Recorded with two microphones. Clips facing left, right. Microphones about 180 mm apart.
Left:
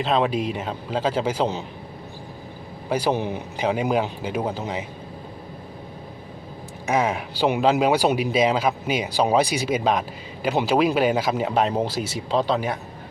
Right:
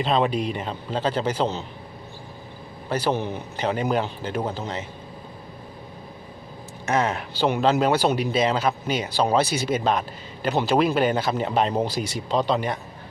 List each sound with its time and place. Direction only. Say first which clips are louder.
0.0 s a man's voice: even; centre (ahead or behind)
2.9 s speech: left 2 dB; 10° left (ahead or behind)
6.8 s speech: left 1 dB; 10° left (ahead or behind)